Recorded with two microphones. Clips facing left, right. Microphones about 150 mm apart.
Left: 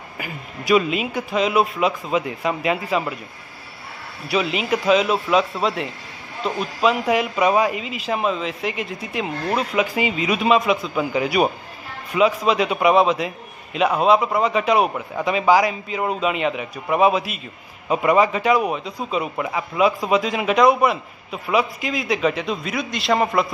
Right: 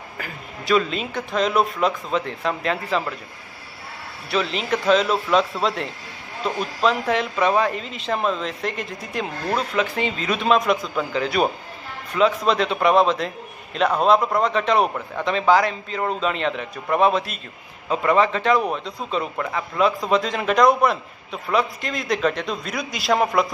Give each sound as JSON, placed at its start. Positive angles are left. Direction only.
{"t": 0.2, "sound": "a man's voice", "side_deg": 10}
{"t": 4.3, "sound": "a man's voice", "side_deg": 10}